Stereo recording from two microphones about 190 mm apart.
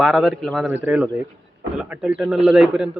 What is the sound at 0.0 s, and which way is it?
A man's voice, centre (ahead or behind).